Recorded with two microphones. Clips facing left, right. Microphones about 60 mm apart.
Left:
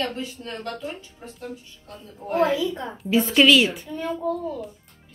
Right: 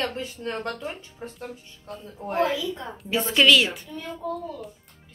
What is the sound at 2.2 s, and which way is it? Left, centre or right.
A woman's voice, centre.